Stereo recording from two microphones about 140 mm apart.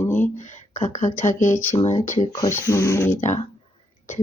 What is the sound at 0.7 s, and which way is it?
Speech, 60° left (ahead or behind).